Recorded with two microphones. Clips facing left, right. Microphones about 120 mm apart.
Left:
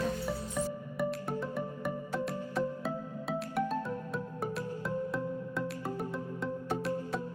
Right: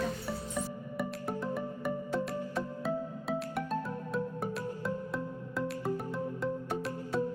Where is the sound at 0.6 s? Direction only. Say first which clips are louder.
Left 4 dB; centre (ahead or behind).